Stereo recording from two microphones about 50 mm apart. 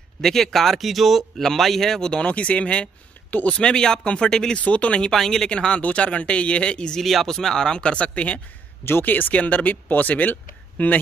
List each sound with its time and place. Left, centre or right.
0.2 s speech: centre
2.2 s speech: left
4.6 s speech: left
5.0 s speech: centre
7.0 s speech: centre; by 8.4 s left
9.0 s speech: left
9.4 s speech: left